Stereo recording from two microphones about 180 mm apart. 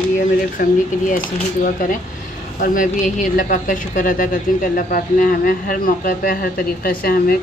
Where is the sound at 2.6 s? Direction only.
45° left (ahead or behind).